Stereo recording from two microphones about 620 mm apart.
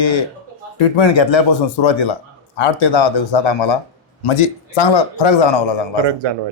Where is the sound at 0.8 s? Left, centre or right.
Left.